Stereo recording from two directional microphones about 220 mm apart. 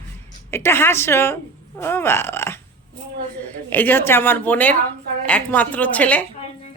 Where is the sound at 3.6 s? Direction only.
10° left (ahead or behind).